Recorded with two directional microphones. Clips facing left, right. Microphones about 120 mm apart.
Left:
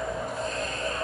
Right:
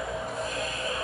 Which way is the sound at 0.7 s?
40° left (ahead or behind).